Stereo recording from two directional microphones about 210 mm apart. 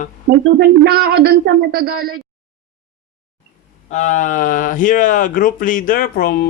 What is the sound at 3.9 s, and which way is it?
Speech, 35° left (ahead or behind).